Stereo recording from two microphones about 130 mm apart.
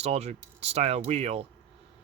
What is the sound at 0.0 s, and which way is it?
Speech, 55° right (ahead or behind).